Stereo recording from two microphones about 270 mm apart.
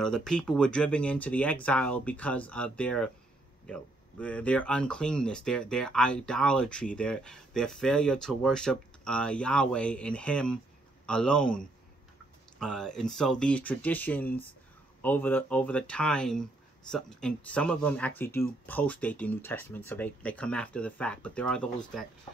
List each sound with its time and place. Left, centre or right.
0.0 s speech: centre